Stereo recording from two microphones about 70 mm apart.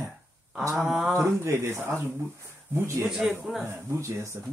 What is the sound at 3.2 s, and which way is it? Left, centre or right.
Speech, centre.